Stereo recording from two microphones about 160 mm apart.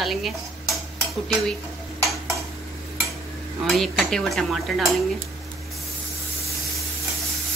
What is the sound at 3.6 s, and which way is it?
Dishes, centre (ahead or behind).